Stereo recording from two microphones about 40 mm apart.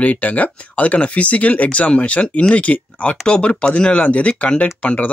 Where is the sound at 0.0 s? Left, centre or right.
Left.